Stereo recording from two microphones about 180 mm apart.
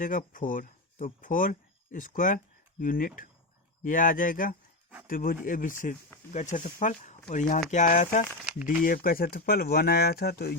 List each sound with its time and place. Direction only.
0.0 s speech: 45° left (ahead or behind)